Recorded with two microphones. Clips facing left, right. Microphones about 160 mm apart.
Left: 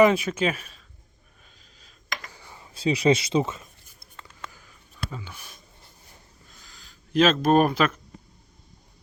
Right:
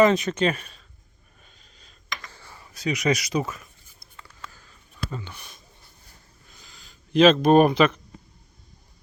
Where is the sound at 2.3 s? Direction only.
15° left (ahead or behind).